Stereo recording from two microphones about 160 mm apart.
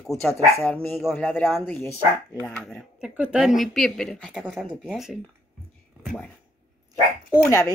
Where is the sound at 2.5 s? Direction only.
5° left (ahead or behind).